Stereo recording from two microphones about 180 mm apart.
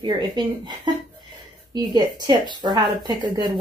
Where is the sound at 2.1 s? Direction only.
25° right (ahead or behind).